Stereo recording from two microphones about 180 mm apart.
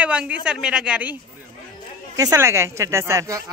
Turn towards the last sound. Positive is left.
turn(degrees=-15)  # may be behind; listen again after turning